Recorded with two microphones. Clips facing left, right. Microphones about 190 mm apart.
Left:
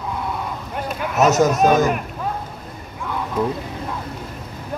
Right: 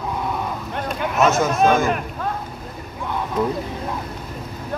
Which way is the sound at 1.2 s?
40° left (ahead or behind).